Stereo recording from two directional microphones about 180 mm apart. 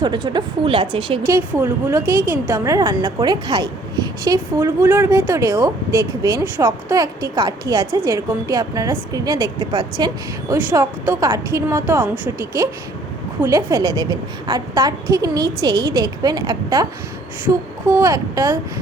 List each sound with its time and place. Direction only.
0.0 s a woman's voice: 25° right (ahead or behind)
1.3 s a woman's voice: 15° right (ahead or behind)
10.5 s a woman's voice: 15° right (ahead or behind)
17.8 s a woman's voice: 15° right (ahead or behind)